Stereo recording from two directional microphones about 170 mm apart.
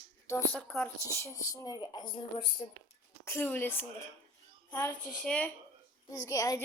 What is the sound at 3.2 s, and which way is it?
Speech, 15° left (ahead or behind).